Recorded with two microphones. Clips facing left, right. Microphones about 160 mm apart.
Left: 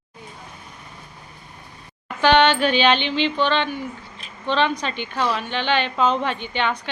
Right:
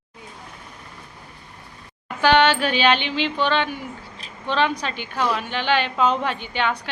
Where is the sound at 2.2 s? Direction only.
5° right (ahead or behind).